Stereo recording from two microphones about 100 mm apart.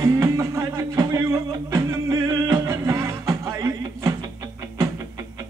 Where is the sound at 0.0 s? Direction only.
30° right (ahead or behind).